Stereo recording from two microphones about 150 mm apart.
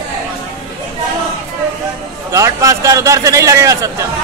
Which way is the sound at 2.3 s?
20° right (ahead or behind).